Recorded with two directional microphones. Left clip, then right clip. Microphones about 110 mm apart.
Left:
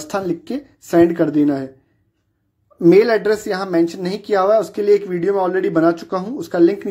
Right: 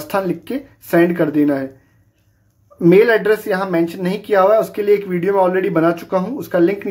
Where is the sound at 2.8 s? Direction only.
25° left (ahead or behind).